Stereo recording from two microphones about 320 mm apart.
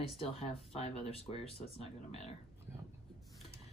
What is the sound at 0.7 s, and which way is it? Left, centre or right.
Speech, centre.